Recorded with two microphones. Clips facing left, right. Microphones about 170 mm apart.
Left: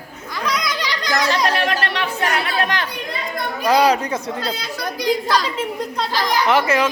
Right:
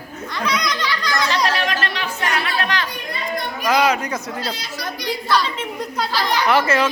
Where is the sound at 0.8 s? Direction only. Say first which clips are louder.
Left 1 dB; 20° left (ahead or behind).